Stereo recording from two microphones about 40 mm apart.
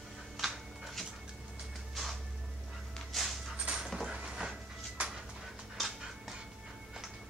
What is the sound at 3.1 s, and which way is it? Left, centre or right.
Pant, centre.